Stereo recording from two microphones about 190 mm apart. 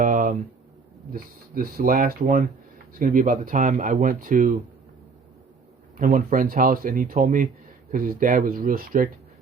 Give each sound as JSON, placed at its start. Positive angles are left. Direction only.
{"t": 0.0, "sound": "a sound", "side_deg": -45}
{"t": 1.1, "sound": "speech", "side_deg": -50}
{"t": 6.0, "sound": "speech", "side_deg": -45}